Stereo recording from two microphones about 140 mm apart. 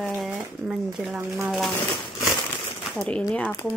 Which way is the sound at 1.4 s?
Centre (ahead or behind).